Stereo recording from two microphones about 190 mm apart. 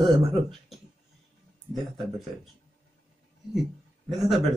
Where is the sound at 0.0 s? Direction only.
Centre (ahead or behind).